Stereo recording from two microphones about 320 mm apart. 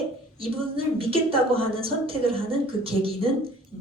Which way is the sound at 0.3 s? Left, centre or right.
Centre.